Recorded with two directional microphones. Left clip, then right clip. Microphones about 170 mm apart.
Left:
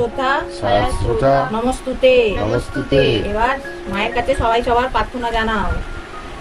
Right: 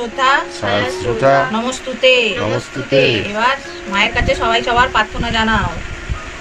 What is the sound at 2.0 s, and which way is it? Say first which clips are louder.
Speech: right 1 dB; 65° left (ahead or behind).